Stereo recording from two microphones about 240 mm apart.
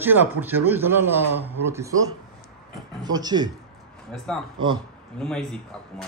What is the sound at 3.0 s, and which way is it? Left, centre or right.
Speech, centre.